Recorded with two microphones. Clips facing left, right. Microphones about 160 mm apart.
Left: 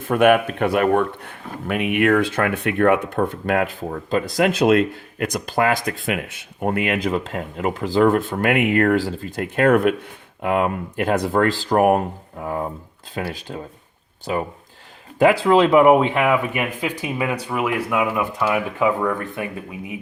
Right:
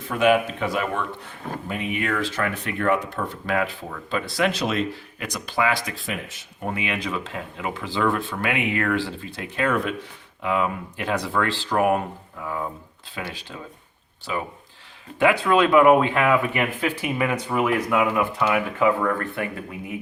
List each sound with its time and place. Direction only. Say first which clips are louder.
0.0 s speech: left 4 dB; 55° left (ahead or behind)
15.2 s speech: left 4 dB; 35° left (ahead or behind); by 19.5 s 15° left (ahead or behind)